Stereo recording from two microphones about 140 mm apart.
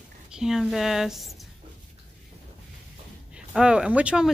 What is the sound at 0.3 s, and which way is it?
Speech, 5° right (ahead or behind).